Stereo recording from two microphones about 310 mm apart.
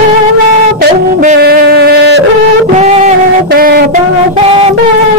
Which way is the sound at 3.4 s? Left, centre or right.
Right.